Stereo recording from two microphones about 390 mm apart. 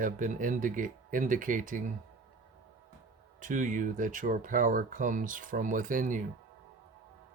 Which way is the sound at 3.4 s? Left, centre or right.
Centre.